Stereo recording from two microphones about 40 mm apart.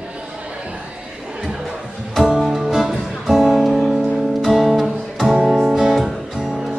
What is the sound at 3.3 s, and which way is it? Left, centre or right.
Music, centre.